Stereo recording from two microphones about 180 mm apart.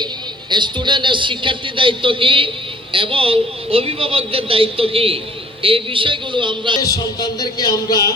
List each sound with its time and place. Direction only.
0.5 s a man's voice: 25° right (ahead or behind)
6.7 s a man's voice: 20° left (ahead or behind)